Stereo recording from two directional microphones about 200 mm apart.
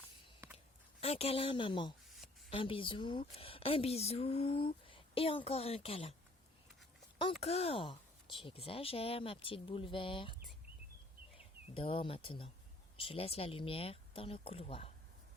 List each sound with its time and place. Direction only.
1.0 s a woman's voice: 30° left (ahead or behind)
7.2 s a woman's voice: 30° left (ahead or behind)
11.3 s a woman's voice: 25° left (ahead or behind)